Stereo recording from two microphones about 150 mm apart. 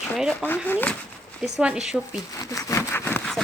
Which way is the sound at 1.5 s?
5° right (ahead or behind).